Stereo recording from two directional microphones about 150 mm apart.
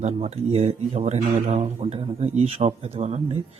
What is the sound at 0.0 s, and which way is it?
Speech, 45° right (ahead or behind).